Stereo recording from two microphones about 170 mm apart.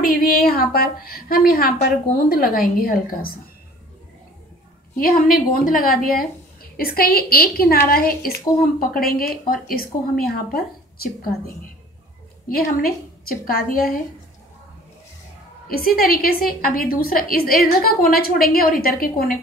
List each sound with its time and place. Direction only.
0.0 s a woman's voice: 60° left (ahead or behind)
4.9 s a woman's voice: 60° left (ahead or behind)
12.4 s a woman's voice: 60° left (ahead or behind)
15.8 s a woman's voice: 60° left (ahead or behind)